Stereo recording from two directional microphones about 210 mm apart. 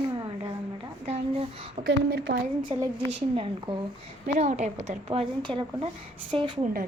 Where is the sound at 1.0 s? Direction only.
30° right (ahead or behind).